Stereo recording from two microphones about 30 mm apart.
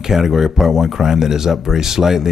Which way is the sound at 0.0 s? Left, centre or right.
Centre.